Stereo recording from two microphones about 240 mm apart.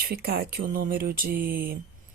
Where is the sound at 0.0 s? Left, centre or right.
Right.